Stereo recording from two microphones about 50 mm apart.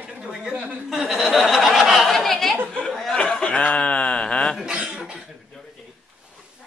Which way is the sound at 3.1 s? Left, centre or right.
Left.